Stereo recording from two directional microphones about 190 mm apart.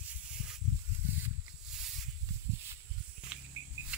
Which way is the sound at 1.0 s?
10° right (ahead or behind).